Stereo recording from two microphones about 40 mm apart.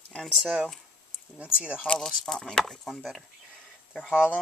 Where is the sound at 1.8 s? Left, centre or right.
Left.